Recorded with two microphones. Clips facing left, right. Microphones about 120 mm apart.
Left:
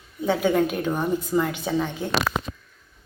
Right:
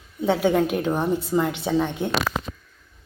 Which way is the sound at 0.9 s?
25° right (ahead or behind).